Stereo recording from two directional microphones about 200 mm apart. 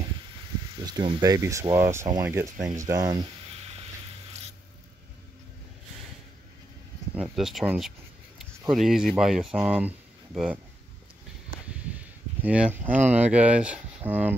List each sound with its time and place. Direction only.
0.7 s speech: 20° right (ahead or behind)
7.2 s speech: 5° right (ahead or behind)
12.4 s speech: 5° right (ahead or behind)